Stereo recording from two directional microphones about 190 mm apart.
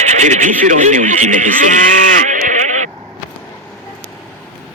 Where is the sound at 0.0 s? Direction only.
40° right (ahead or behind).